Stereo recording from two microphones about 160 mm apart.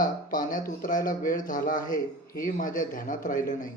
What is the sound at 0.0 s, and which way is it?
Speech, 60° left (ahead or behind).